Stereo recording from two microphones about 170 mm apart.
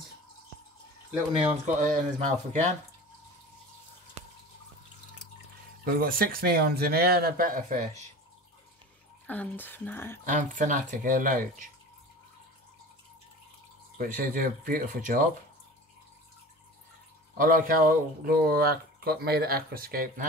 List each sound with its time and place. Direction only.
1.3 s speech: 35° right (ahead or behind)
2.0 s speech: 45° right (ahead or behind)
5.9 s speech: 55° right (ahead or behind)
9.3 s speech: 10° left (ahead or behind)
10.2 s speech: 45° right (ahead or behind)
13.9 s speech: 55° right (ahead or behind)
17.4 s speech: 55° right (ahead or behind)